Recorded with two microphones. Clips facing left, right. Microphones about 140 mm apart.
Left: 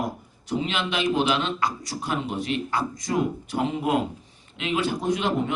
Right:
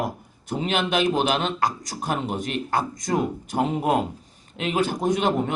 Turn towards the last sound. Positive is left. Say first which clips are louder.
# right 3 dB
turn(degrees=-45)  # may be behind; listen again after turning